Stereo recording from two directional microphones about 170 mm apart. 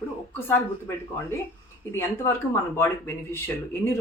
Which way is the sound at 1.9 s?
15° left (ahead or behind).